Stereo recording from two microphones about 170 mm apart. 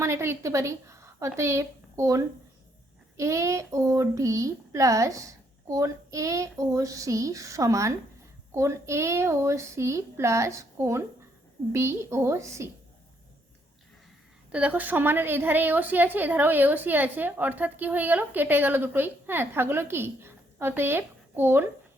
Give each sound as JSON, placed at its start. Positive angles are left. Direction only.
{"t": 0.0, "sound": "a woman's voice", "side_deg": -15}
{"t": 3.2, "sound": "a sound", "side_deg": -20}
{"t": 8.5, "sound": "a woman's voice", "side_deg": -15}
{"t": 14.5, "sound": "a woman's voice", "side_deg": -10}